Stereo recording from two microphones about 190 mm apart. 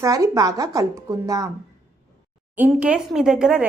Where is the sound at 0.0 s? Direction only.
15° right (ahead or behind).